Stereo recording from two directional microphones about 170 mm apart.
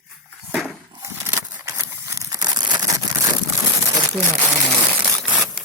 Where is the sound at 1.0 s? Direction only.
20° right (ahead or behind).